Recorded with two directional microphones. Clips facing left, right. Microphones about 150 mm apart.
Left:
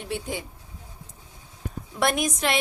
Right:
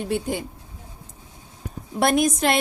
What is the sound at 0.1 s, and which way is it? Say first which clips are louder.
Speech: right 4 dB; 50° right (ahead or behind).